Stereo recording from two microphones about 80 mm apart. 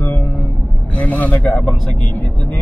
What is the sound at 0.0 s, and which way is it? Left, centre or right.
Vehicle, left.